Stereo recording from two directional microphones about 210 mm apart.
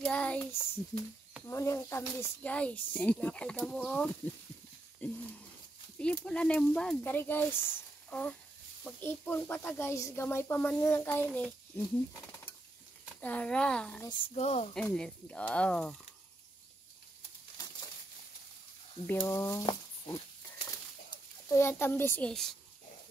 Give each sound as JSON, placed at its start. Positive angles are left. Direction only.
{"t": 0.0, "sound": "speech", "side_deg": 5}
{"t": 6.2, "sound": "speech", "side_deg": 5}
{"t": 13.2, "sound": "speech", "side_deg": 5}
{"t": 14.0, "sound": "speech", "side_deg": 30}
{"t": 14.7, "sound": "speech", "side_deg": 5}
{"t": 19.0, "sound": "speech", "side_deg": 15}
{"t": 20.6, "sound": "a sound", "side_deg": 15}